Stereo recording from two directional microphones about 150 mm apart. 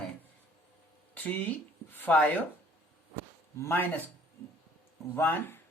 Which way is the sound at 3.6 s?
15° left (ahead or behind).